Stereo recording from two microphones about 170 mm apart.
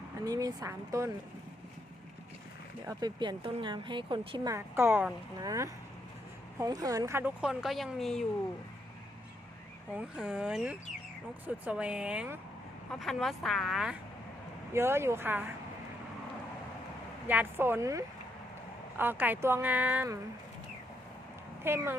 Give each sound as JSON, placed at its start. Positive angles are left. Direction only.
{"t": 0.3, "sound": "speech", "side_deg": -20}
{"t": 2.8, "sound": "speech", "side_deg": -25}
{"t": 4.5, "sound": "speech", "side_deg": -15}
{"t": 9.9, "sound": "speech", "side_deg": -5}
{"t": 14.7, "sound": "speech", "side_deg": -15}
{"t": 17.2, "sound": "speech", "side_deg": -10}
{"t": 21.6, "sound": "speech", "side_deg": -15}